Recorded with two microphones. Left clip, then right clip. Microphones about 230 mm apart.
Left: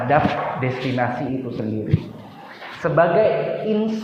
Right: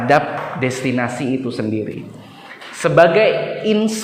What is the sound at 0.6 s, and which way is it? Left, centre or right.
Speech, right.